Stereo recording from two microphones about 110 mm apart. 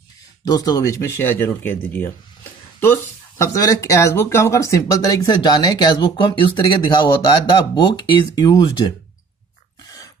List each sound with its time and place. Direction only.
0.5 s speech: 35° left (ahead or behind)